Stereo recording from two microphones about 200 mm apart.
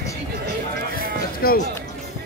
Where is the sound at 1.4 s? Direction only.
50° left (ahead or behind).